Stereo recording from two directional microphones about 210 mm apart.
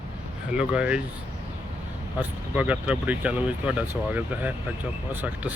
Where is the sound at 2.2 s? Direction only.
5° right (ahead or behind).